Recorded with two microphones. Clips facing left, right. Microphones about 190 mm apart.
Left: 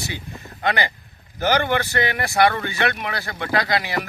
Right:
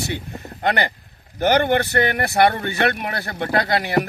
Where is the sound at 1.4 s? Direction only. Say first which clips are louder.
Right 3 dB; 55° right (ahead or behind).